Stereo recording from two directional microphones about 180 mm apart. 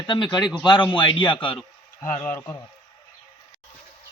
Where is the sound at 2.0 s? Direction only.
10° left (ahead or behind).